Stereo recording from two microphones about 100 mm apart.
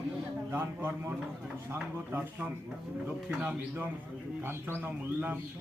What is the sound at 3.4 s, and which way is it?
A man's voice, 15° right (ahead or behind).